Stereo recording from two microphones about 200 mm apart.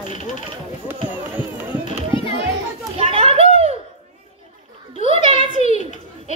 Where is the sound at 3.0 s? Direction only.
30° right (ahead or behind).